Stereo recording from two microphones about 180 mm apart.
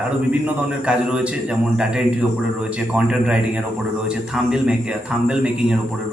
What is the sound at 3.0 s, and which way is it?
Speech, 5° right (ahead or behind).